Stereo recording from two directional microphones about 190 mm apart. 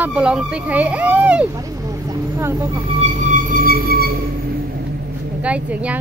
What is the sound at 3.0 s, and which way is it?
Music, 40° right (ahead or behind).